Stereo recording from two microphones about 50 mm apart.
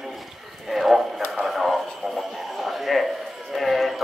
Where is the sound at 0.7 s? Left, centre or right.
Centre.